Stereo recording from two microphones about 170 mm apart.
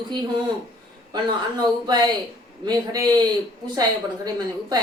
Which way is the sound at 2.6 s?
25° right (ahead or behind).